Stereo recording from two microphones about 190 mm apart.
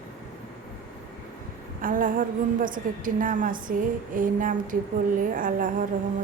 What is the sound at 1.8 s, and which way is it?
A woman's voice, 45° right (ahead or behind).